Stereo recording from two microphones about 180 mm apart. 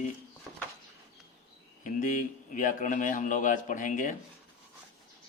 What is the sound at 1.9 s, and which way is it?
Speech, 45° left (ahead or behind).